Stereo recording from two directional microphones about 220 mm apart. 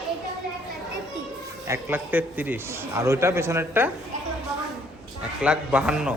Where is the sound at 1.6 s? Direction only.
10° right (ahead or behind).